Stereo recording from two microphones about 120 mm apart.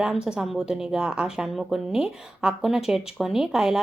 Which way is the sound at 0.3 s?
5° right (ahead or behind).